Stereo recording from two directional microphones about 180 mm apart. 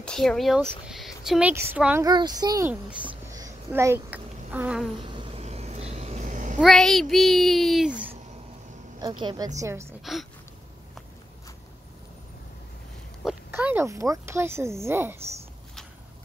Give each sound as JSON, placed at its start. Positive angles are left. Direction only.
{"t": 0.0, "sound": "speech", "side_deg": 5}
{"t": 2.0, "sound": "a child's voice", "side_deg": -25}
{"t": 3.3, "sound": "a sound", "side_deg": -15}
{"t": 5.0, "sound": "a sound", "side_deg": -30}
{"t": 6.6, "sound": "a child's voice", "side_deg": 0}
{"t": 9.0, "sound": "a child's voice", "side_deg": -25}
{"t": 10.1, "sound": "a child's voice", "side_deg": 0}
{"t": 13.2, "sound": "speech", "side_deg": -5}